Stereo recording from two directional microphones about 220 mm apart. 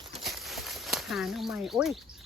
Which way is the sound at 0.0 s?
Centre (ahead or behind).